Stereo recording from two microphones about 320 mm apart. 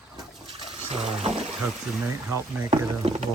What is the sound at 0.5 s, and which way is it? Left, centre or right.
Toilet flush, centre.